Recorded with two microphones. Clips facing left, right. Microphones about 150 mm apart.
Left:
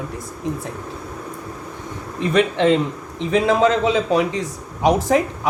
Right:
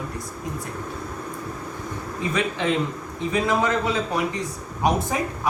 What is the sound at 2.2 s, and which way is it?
Speech, 75° left (ahead or behind).